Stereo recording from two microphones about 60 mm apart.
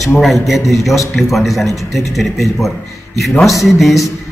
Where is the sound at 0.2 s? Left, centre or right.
Centre.